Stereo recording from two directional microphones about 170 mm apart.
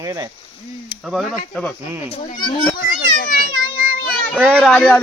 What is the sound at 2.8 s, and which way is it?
Children playing, 50° left (ahead or behind).